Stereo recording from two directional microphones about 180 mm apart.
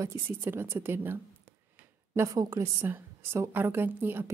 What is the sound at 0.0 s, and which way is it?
A woman's voice, 15° right (ahead or behind).